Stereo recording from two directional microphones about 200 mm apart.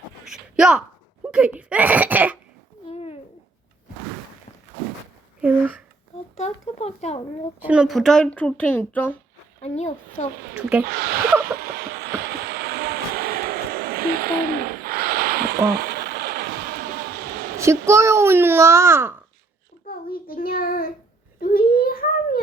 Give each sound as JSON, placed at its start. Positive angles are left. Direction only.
{"t": 0.3, "sound": "speech", "side_deg": -5}
{"t": 2.9, "sound": "babbling", "side_deg": 30}
{"t": 5.4, "sound": "speech", "side_deg": -10}
{"t": 6.3, "sound": "speech", "side_deg": 35}
{"t": 7.6, "sound": "speech", "side_deg": -5}
{"t": 9.6, "sound": "speech", "side_deg": 35}
{"t": 10.6, "sound": "a child's voice", "side_deg": -5}
{"t": 10.8, "sound": "speech", "side_deg": -50}
{"t": 11.5, "sound": "train", "side_deg": -50}
{"t": 17.6, "sound": "a child's voice", "side_deg": -15}
{"t": 19.9, "sound": "a child's voice", "side_deg": 50}
{"t": 21.4, "sound": "a sound", "side_deg": 45}